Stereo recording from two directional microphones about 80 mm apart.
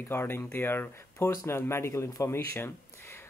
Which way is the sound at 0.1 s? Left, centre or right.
Left.